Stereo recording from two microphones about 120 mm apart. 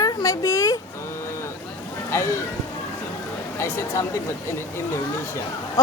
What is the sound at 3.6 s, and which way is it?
Speech, 20° left (ahead or behind).